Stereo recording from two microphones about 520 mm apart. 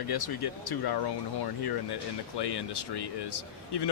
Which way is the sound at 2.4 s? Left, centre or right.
Left.